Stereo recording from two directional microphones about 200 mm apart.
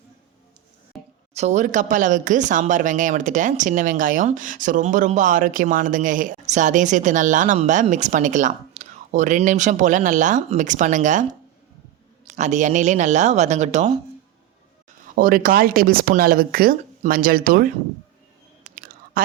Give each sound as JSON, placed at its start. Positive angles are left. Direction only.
{"t": 1.3, "sound": "speech", "side_deg": -35}
{"t": 15.0, "sound": "speech", "side_deg": -45}
{"t": 18.8, "sound": "chewing", "side_deg": -45}